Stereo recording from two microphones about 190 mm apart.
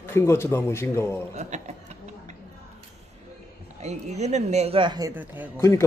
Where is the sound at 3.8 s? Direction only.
35° right (ahead or behind); by 5.5 s 10° right (ahead or behind).